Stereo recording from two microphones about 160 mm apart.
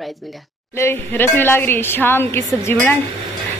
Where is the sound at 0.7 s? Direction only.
15° left (ahead or behind).